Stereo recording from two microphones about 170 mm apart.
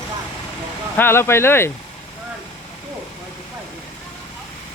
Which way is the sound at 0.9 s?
15° left (ahead or behind).